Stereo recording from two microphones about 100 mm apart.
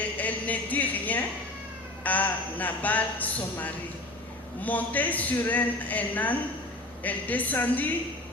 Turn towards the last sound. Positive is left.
turn(degrees=15)  # may be behind; listen again after turning